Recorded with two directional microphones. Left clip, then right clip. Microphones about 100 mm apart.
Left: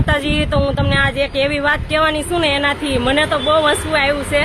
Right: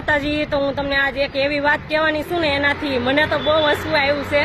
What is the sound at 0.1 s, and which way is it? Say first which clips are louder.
Speech: left 1 dB; 30° left (ahead or behind).